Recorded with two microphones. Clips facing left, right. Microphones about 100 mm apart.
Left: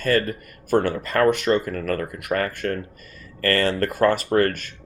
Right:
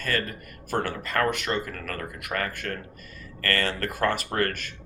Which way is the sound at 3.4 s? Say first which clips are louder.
Left 7 dB; 35° left (ahead or behind).